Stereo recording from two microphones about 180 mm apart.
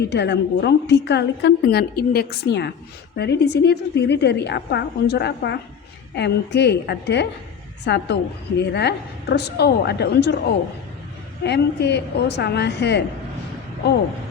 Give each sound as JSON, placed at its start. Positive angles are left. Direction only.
{"t": 0.1, "sound": "a woman's voice", "side_deg": 70}
{"t": 11.4, "sound": "a woman's voice", "side_deg": 65}